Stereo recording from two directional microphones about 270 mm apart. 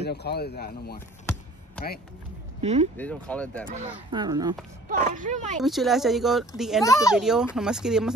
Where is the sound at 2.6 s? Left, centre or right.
Right.